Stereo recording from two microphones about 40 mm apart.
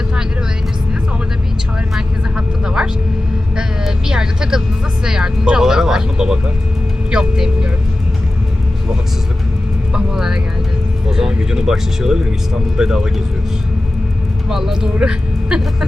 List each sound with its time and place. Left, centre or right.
2.0 s vehicle: centre
3.5 s a sound: centre
5.0 s speech: centre
10.1 s music: centre
11.1 s speech: centre
14.5 s speech: centre